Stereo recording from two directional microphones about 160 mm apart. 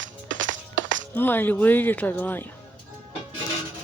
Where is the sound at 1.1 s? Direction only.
10° left (ahead or behind).